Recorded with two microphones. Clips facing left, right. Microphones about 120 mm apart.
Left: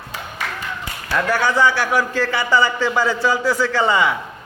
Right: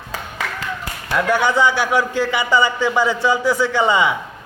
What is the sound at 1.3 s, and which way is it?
A man's voice, 20° right (ahead or behind).